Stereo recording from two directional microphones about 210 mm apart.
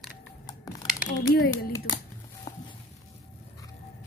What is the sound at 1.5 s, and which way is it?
Speech, 15° left (ahead or behind).